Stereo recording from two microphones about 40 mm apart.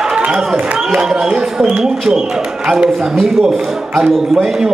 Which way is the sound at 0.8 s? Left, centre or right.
Centre.